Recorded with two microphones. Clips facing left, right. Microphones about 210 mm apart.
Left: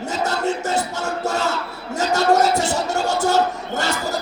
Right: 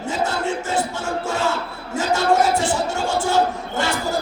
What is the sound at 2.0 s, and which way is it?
Music, 40° left (ahead or behind).